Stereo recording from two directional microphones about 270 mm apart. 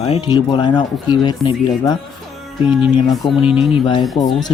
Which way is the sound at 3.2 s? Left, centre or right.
Centre.